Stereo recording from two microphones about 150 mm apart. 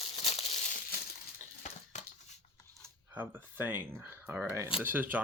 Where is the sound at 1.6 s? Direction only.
55° left (ahead or behind).